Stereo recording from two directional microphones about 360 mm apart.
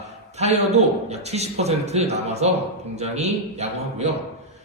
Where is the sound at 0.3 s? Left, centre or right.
Centre.